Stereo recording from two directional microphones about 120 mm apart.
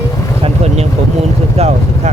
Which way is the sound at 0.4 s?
65° right (ahead or behind).